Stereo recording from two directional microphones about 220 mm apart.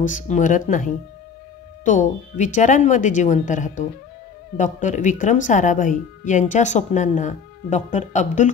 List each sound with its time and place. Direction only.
0.0 s a woman's voice: 35° left (ahead or behind)